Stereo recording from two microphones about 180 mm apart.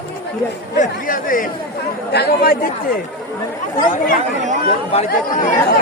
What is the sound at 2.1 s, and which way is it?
Speech, 65° left (ahead or behind).